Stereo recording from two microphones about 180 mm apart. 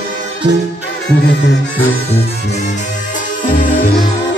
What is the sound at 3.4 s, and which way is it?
Music, 45° left (ahead or behind).